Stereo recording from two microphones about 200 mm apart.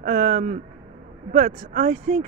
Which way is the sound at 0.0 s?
45° right (ahead or behind).